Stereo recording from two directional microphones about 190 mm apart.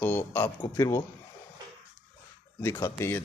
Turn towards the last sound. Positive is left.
turn(degrees=15)  # may be behind; listen again after turning